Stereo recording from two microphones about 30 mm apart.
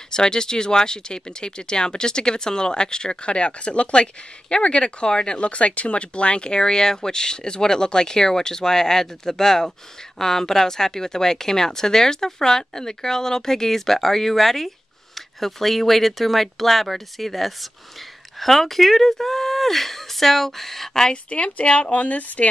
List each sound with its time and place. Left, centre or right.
0.1 s speech: left
3.3 s speech: left
5.4 s speech: left; by 21.1 s centre
21.1 s speech: left
21.9 s speech: left